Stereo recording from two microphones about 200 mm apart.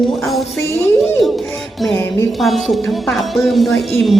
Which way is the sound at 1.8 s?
10° left (ahead or behind).